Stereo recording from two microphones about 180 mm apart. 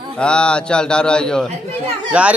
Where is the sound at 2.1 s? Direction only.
5° right (ahead or behind).